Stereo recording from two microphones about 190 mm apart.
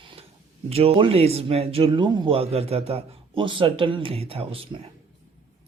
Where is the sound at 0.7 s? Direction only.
30° right (ahead or behind).